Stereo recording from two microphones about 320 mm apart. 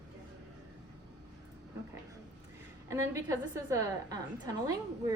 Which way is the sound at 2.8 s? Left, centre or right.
Centre.